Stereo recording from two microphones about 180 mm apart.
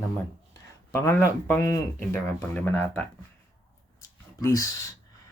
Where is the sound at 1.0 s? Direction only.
15° left (ahead or behind).